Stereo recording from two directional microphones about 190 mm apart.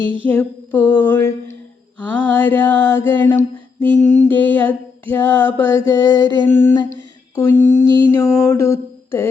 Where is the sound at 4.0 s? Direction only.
40° left (ahead or behind).